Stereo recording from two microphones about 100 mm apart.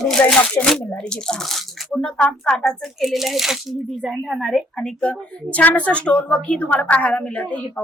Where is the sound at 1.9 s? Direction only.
10° left (ahead or behind).